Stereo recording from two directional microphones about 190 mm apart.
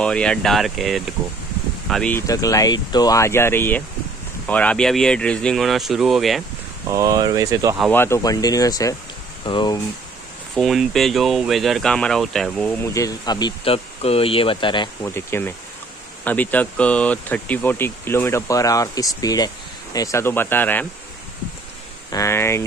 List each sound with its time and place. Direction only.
0.0 s speech: 5° left (ahead or behind)
2.2 s speech: 20° left (ahead or behind); by 6.4 s centre (ahead or behind)
6.9 s speech: 20° right (ahead or behind)
7.9 s speech: 15° left (ahead or behind)
10.5 s speech: centre (ahead or behind)
12.8 s speech: 15° left (ahead or behind)
15.0 s speech: 10° left (ahead or behind)
22.1 s speech: 15° left (ahead or behind)